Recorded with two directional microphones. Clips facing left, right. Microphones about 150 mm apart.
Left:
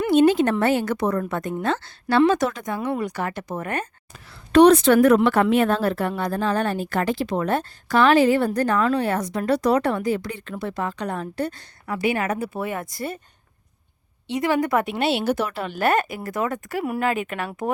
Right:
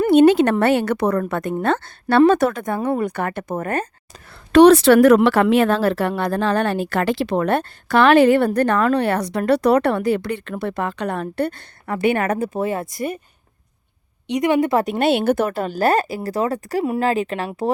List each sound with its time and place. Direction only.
0.1 s a woman's voice: 70° right (ahead or behind); by 3.8 s 45° right (ahead or behind)
4.5 s a woman's voice: 85° right; by 12.8 s 40° right (ahead or behind)
12.8 s a woman's voice: 20° right (ahead or behind)
14.3 s a woman's voice: 20° right (ahead or behind)
14.8 s a woman's voice: 50° right (ahead or behind); by 17.7 s 35° right (ahead or behind)